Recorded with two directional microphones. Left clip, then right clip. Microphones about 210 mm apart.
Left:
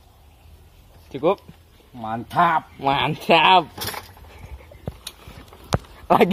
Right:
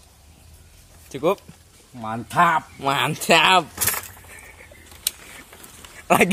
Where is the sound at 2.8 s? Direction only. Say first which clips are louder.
Left 1 dB; centre (ahead or behind).